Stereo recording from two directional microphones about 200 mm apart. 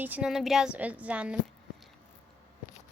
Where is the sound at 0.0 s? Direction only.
5° right (ahead or behind).